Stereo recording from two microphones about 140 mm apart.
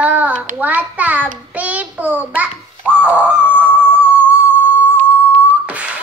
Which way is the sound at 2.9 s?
10° right (ahead or behind).